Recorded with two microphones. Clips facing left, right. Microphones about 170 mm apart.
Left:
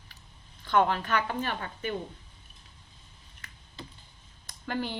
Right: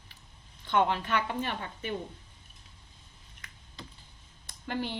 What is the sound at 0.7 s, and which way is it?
Speech, 25° right (ahead or behind).